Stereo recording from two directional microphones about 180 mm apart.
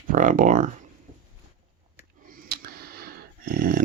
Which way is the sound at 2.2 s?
50° right (ahead or behind).